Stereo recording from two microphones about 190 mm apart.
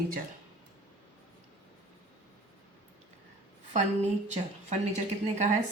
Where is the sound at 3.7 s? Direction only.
40° right (ahead or behind).